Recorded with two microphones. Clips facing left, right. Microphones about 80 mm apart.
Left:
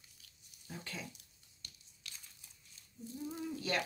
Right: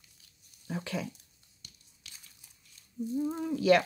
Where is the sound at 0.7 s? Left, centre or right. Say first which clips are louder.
Right 11 dB; right.